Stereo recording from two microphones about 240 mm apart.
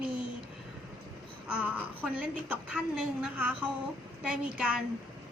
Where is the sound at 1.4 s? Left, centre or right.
Centre.